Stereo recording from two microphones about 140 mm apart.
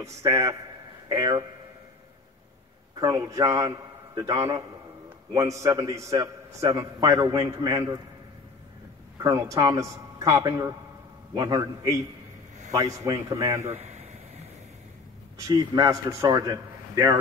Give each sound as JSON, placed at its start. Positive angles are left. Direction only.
{"t": 0.0, "sound": "a man's voice", "side_deg": -25}
{"t": 3.0, "sound": "a man's voice", "side_deg": -25}
{"t": 5.3, "sound": "a man's voice", "side_deg": -25}
{"t": 9.2, "sound": "a man's voice", "side_deg": -25}
{"t": 13.6, "sound": "a sound", "side_deg": -55}
{"t": 15.3, "sound": "a man's voice", "side_deg": -25}